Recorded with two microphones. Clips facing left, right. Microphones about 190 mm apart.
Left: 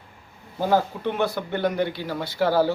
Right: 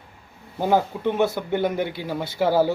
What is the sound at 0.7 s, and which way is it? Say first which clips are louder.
A man's voice: right 2 dB; 20° right (ahead or behind).